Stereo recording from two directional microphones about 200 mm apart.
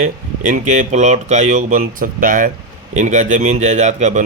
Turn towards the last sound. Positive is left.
turn(degrees=-35)  # may be behind; listen again after turning